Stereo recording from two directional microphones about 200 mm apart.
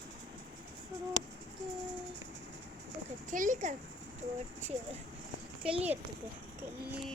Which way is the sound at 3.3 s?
40° right (ahead or behind).